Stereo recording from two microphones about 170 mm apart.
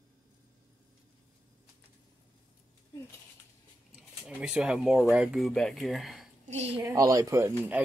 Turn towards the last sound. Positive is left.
turn(degrees=-15)  # may be behind; listen again after turning